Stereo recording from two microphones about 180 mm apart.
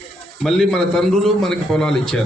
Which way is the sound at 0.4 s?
Centre (ahead or behind).